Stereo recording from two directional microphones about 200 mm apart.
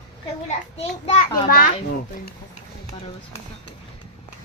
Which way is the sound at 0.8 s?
35° left (ahead or behind).